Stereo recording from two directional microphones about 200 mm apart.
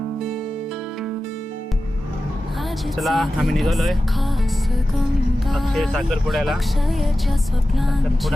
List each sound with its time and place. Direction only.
3.0 s speech: centre (ahead or behind)
5.5 s speech: centre (ahead or behind)